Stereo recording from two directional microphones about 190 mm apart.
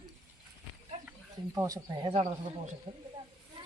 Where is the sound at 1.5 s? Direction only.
20° right (ahead or behind).